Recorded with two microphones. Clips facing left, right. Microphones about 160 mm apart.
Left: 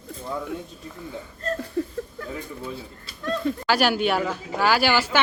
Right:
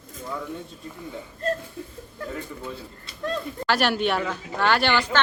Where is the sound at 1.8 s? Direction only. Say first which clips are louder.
Left 11 dB; 75° left (ahead or behind).